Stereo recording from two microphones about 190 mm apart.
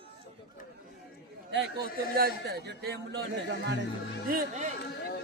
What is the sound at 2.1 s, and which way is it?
Speech, 55° right (ahead or behind).